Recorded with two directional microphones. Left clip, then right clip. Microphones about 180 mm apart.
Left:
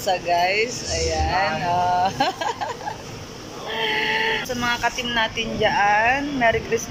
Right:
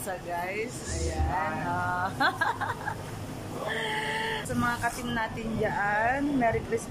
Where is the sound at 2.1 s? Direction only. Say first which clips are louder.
Left 4 dB; 5° left (ahead or behind).